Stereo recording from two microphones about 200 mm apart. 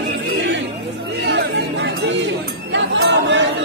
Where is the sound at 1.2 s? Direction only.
55° right (ahead or behind).